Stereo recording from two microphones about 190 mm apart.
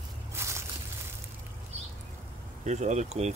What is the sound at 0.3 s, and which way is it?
Walk, 15° right (ahead or behind).